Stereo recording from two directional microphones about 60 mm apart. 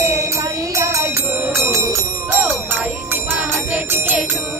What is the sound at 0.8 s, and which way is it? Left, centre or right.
Music, right.